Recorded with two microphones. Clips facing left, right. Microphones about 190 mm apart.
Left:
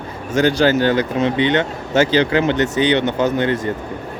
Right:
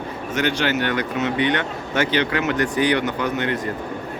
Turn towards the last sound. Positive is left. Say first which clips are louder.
# left 5 dB
turn(degrees=30)  # may be behind; listen again after turning